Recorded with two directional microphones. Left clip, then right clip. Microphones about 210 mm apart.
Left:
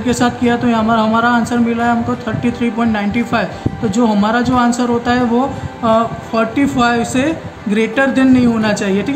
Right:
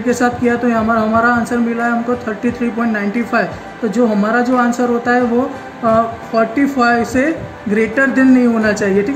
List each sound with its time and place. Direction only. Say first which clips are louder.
0.1 s a man's voice: right 1 dB; 40° left (ahead or behind)